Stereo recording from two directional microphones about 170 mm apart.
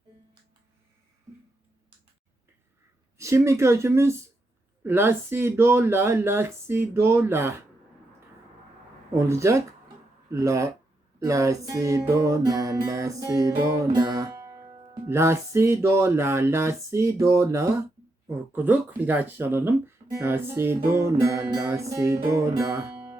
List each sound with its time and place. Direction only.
3.2 s music: 15° right (ahead or behind)
9.1 s music: 15° right (ahead or behind)